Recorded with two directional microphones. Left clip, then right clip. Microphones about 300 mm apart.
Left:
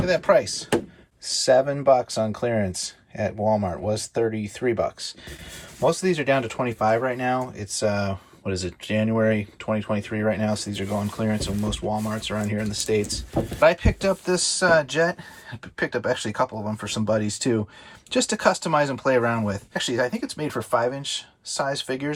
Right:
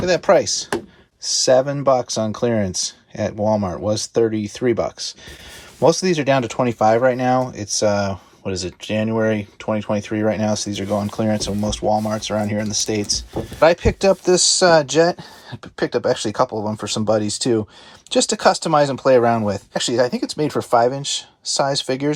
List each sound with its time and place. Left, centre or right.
0.0 s speech: centre